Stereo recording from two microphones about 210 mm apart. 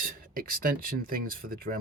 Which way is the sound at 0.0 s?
40° right (ahead or behind).